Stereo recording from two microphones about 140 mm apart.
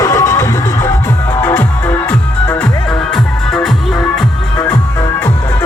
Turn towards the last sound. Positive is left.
turn(degrees=0)  # may be behind; listen again after turning